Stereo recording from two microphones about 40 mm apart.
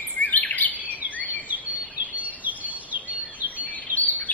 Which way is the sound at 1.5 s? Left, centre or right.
Right.